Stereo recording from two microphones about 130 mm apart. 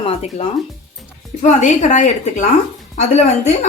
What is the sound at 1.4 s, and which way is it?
A woman's voice, 70° left (ahead or behind).